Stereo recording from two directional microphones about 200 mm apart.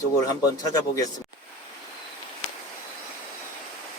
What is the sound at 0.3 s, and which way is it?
Speech, 20° left (ahead or behind).